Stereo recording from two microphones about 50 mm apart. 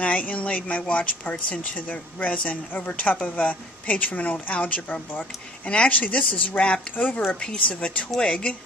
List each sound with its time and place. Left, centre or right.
0.0 s a woman's voice: left
5.9 s a woman's voice: left